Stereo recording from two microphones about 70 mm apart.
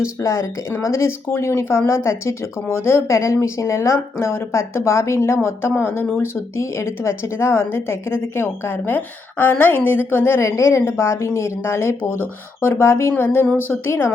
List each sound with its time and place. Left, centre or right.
0.2 s speech: left